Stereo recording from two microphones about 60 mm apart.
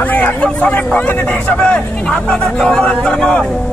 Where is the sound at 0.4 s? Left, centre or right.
Left.